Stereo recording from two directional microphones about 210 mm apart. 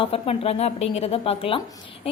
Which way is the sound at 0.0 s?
25° left (ahead or behind).